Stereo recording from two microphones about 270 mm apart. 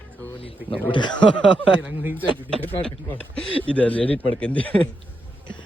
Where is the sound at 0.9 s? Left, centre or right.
Centre.